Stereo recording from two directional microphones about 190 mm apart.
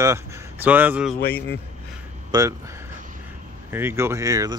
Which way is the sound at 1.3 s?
10° left (ahead or behind).